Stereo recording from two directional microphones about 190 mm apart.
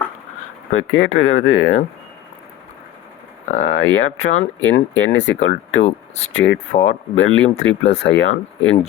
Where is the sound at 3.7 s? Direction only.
85° left.